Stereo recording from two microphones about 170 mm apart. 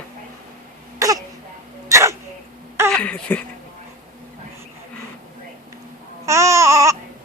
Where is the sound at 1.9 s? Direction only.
15° right (ahead or behind).